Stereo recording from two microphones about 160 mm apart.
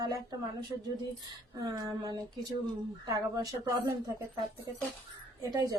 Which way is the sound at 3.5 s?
20° right (ahead or behind).